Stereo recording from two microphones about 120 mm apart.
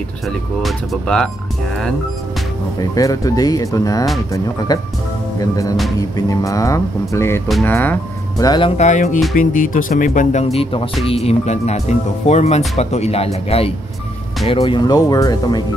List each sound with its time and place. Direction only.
0.6 s speech: 5° left (ahead or behind)
2.8 s speech: 30° left (ahead or behind); by 8.0 s 15° left (ahead or behind)
8.4 s speech: 40° left (ahead or behind)
8.7 s speech: 85° left; by 13.7 s 55° left (ahead or behind)
14.6 s speech: 35° left (ahead or behind)